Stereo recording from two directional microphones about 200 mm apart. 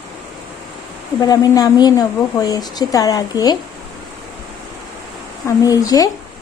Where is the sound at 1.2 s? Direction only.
20° left (ahead or behind).